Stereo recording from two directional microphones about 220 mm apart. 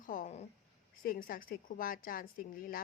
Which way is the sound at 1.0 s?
40° left (ahead or behind).